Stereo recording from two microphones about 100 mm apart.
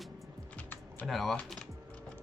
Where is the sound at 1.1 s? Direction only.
Centre (ahead or behind).